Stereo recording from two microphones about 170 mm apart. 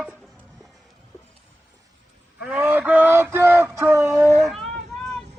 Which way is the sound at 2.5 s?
10° right (ahead or behind).